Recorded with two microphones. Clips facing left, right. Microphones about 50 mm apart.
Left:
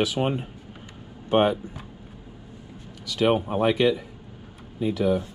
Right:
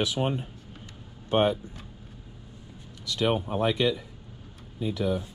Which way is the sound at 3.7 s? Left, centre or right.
Left.